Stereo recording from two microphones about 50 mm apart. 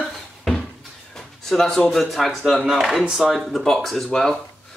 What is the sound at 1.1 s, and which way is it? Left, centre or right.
Speech, centre.